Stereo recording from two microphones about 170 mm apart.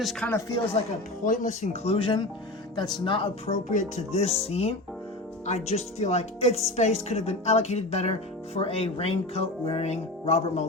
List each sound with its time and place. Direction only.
0.0 s speech: centre (ahead or behind)
0.3 s speech: 20° left (ahead or behind)
1.2 s speech: 50° left (ahead or behind); by 3.5 s 30° left (ahead or behind)
3.5 s speech: 45° left (ahead or behind)